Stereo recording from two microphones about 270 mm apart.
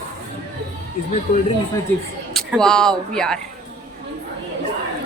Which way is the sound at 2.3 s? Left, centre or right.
Centre.